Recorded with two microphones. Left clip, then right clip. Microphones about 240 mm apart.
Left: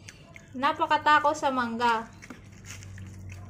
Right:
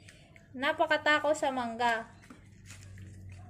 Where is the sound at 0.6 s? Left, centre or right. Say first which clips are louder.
Left 4 dB; right.